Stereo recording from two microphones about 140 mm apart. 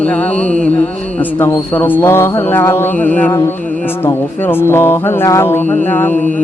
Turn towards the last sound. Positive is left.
turn(degrees=15)  # may be behind; listen again after turning